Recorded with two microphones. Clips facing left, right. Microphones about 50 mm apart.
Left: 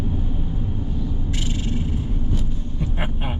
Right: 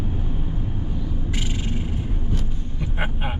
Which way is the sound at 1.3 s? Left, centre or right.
Centre.